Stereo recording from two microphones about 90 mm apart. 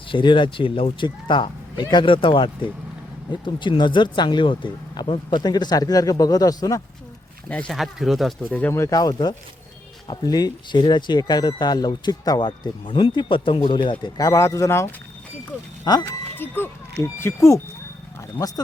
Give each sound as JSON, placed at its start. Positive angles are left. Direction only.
{"t": 0.1, "sound": "speech", "side_deg": 65}
{"t": 5.4, "sound": "speech", "side_deg": 50}
{"t": 7.7, "sound": "speech", "side_deg": 0}
{"t": 8.4, "sound": "speech", "side_deg": 15}
{"t": 8.7, "sound": "speech", "side_deg": 35}
{"t": 14.2, "sound": "speech", "side_deg": 35}
{"t": 15.8, "sound": "speech", "side_deg": 50}
{"t": 16.3, "sound": "speech", "side_deg": 25}
{"t": 18.3, "sound": "speech", "side_deg": 45}